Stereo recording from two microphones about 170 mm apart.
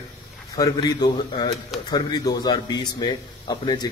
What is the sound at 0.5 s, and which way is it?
Speech, 25° left (ahead or behind).